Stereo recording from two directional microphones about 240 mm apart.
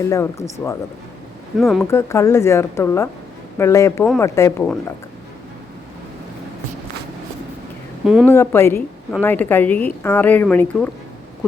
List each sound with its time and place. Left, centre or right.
0.0 s a woman's voice: centre
1.5 s speech: centre
1.9 s a woman's voice: centre
8.0 s speech: centre
8.3 s a woman's voice: centre